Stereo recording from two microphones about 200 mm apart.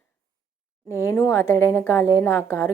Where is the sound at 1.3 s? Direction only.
15° left (ahead or behind).